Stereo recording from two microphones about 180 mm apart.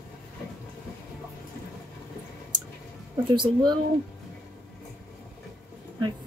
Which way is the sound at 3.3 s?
25° right (ahead or behind).